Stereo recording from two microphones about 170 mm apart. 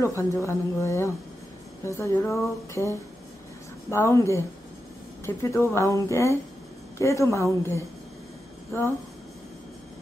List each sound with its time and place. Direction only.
0.0 s a woman's voice: 15° left (ahead or behind)